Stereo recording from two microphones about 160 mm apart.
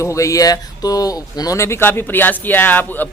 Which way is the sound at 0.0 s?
20° left (ahead or behind).